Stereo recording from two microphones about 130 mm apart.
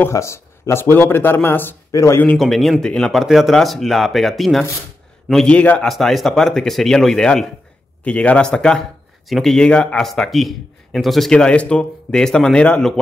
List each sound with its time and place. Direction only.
0.0 s speech: 20° left (ahead or behind)
2.2 s speech: centre (ahead or behind)